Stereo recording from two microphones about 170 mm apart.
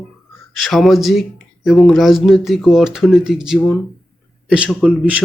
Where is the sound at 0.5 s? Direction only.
Centre (ahead or behind).